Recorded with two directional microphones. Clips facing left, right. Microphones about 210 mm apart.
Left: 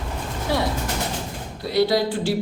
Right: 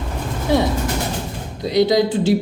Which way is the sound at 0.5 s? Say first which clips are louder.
Right 6 dB; 20° right (ahead or behind).